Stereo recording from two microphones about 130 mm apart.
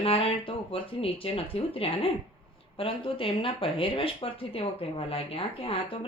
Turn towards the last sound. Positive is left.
turn(degrees=45)  # may be behind; listen again after turning